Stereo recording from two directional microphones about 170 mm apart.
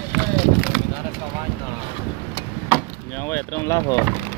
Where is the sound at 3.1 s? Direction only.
15° left (ahead or behind).